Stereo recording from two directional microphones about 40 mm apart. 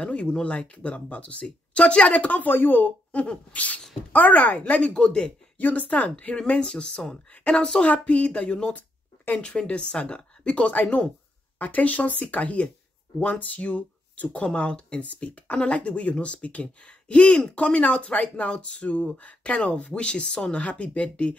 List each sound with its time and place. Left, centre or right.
0.0 s speech: left
2.4 s speech: left
3.1 s speech: left
5.6 s speech: left
6.3 s speech: left
7.8 s speech: left
8.7 s a sound: left
9.4 s speech: left
14.4 s speech: left